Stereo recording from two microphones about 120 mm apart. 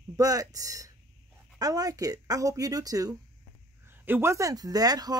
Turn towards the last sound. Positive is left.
turn(degrees=-35)  # may be behind; listen again after turning